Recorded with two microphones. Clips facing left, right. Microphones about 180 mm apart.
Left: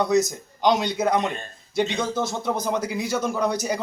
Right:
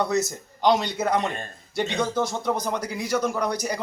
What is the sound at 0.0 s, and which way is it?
Speech, 15° left (ahead or behind).